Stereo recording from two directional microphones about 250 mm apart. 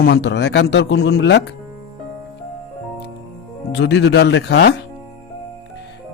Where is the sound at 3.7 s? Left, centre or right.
Left.